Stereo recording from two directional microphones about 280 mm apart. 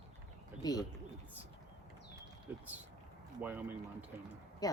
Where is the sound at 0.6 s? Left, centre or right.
Centre.